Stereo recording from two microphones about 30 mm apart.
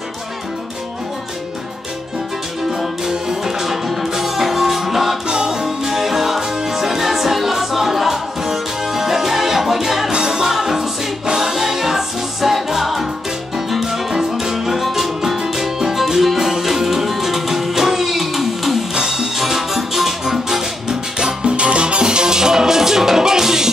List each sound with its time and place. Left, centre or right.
3.1 s music: centre
5.3 s music: right
5.9 s music: centre
10.1 s music: right; by 15.3 s centre
15.3 s music: centre
18.9 s music: centre
21.4 s music: right; by 23.7 s centre